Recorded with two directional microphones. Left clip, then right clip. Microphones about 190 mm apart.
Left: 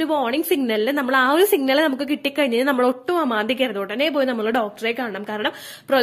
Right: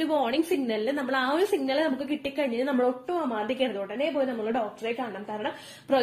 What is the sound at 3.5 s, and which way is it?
A woman's voice, 45° left (ahead or behind).